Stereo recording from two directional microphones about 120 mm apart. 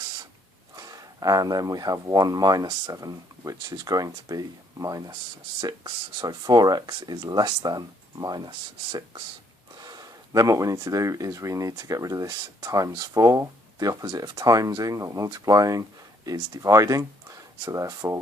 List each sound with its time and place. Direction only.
0.8 s speech: 30° right (ahead or behind)